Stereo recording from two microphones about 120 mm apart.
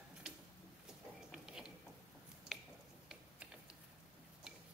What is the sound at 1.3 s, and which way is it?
Mechanisms, 5° right (ahead or behind).